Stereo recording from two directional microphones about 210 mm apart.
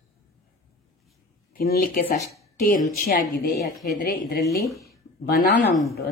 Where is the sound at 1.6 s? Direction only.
45° left (ahead or behind).